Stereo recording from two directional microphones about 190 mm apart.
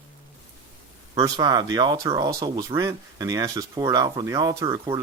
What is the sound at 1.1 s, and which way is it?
Speech, 20° right (ahead or behind).